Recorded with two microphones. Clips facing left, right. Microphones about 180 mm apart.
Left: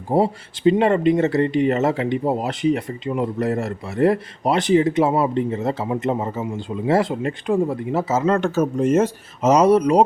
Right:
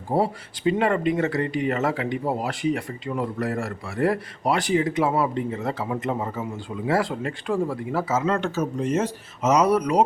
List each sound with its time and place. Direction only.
0.1 s speech: 25° left (ahead or behind)
8.3 s speech: 50° left (ahead or behind)
9.4 s speech: 30° left (ahead or behind)